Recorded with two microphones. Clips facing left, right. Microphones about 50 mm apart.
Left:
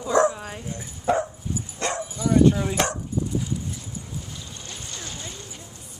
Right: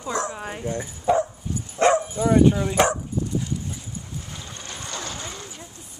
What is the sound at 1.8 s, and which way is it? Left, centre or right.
Dog, right.